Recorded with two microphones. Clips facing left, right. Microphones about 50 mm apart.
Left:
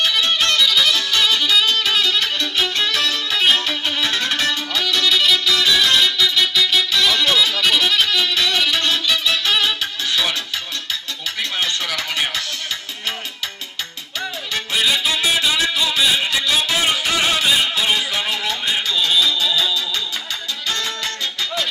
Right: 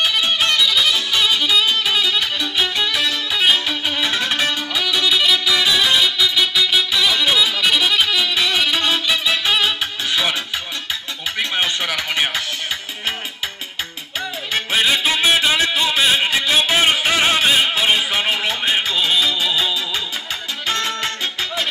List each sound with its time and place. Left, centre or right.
0.0 s music: centre
11.3 s music: right
14.5 s music: right